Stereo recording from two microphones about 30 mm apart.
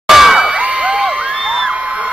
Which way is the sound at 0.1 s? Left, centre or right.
Centre.